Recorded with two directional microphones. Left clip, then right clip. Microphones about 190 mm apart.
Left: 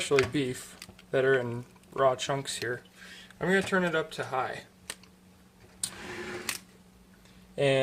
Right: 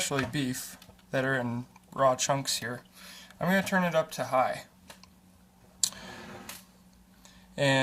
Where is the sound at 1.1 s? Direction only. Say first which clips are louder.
Left 4 dB; 30° left (ahead or behind).